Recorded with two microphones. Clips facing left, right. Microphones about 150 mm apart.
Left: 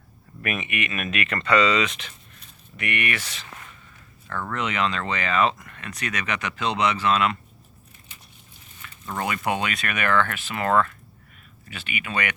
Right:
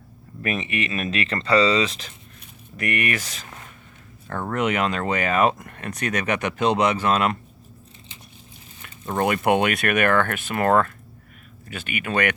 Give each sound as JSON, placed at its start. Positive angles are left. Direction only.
{"t": 0.4, "sound": "speech", "side_deg": -30}
{"t": 9.1, "sound": "speech", "side_deg": -50}